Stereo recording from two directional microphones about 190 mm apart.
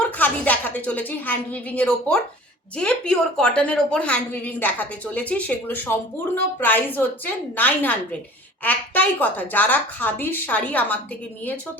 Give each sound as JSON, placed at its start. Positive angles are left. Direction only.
{"t": 0.2, "sound": "a woman's voice", "side_deg": 10}